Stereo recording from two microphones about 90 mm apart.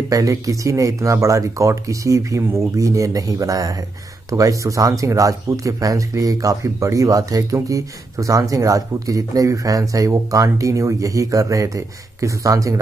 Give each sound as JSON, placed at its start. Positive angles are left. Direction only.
{"t": 0.1, "sound": "speech", "side_deg": -40}